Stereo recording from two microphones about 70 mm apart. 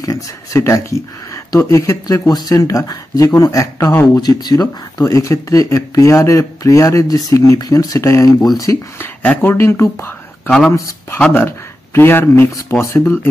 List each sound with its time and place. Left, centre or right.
0.0 s speech: left
4.2 s speech: left
5.0 s speech: left
8.0 s speech: left
9.0 s speech: left